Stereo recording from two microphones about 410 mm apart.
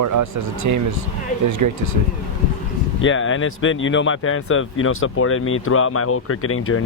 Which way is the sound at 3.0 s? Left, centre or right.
Left.